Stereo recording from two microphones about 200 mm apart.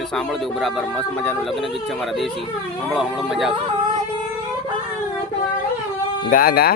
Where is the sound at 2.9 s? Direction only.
Centre (ahead or behind).